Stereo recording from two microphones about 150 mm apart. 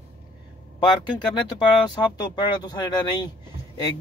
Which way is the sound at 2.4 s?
30° left (ahead or behind).